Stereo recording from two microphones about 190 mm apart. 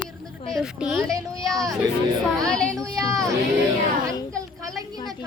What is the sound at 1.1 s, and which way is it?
Speech, 20° right (ahead or behind).